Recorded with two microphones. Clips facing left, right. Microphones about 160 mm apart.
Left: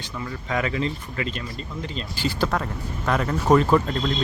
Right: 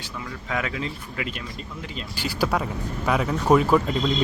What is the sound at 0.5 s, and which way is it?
Speech, 5° right (ahead or behind).